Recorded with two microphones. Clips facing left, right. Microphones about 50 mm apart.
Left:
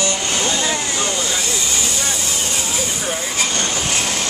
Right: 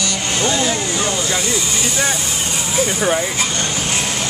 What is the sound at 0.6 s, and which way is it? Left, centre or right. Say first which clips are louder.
Speech: right 2 dB; centre.